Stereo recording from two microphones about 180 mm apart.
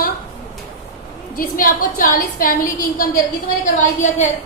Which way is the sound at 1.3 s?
50° left (ahead or behind).